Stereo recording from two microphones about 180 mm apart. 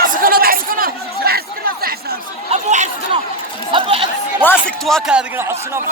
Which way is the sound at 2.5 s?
35° right (ahead or behind).